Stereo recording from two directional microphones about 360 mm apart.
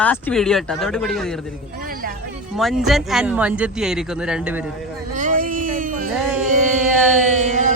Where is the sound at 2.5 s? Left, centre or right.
Centre.